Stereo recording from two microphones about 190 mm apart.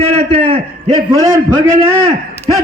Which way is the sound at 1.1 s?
15° right (ahead or behind).